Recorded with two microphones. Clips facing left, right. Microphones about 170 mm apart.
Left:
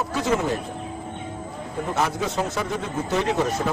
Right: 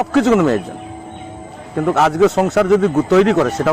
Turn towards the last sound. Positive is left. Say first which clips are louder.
# right 9 dB
turn(degrees=-80)